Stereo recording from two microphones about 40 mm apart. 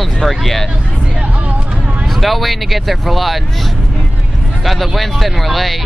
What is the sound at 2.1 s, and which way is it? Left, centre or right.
Speech, centre.